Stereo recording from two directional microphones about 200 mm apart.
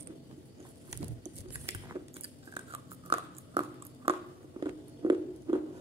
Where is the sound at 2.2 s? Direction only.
30° right (ahead or behind).